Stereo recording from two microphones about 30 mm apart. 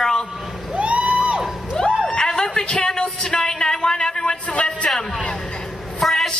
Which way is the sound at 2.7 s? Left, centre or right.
Left.